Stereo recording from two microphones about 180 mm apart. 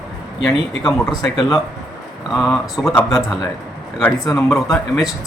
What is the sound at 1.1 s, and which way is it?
Speech, 25° left (ahead or behind).